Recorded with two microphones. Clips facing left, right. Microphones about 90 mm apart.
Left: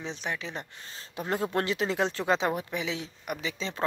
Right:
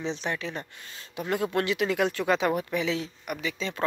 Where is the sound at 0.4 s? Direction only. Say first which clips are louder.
Right 3 dB; 20° left (ahead or behind).